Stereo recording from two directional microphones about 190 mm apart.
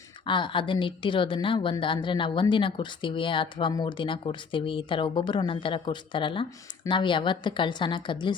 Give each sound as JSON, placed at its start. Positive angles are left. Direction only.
{"t": 0.3, "sound": "a woman's voice", "side_deg": 25}